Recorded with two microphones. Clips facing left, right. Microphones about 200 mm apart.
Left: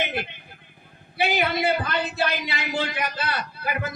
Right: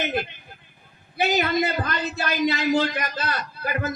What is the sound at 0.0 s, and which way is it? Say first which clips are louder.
A man's voice: right 2 dB; 45° right (ahead or behind).